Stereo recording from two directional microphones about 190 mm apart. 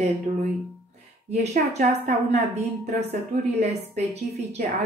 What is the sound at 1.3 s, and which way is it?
A woman's voice, 35° right (ahead or behind).